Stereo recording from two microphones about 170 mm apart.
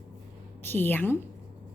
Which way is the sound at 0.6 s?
10° left (ahead or behind).